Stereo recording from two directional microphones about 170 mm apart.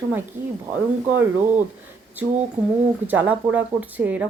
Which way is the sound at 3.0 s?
10° right (ahead or behind).